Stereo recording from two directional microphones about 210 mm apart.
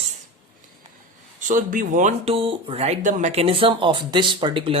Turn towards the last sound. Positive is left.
turn(degrees=-25)  # may be behind; listen again after turning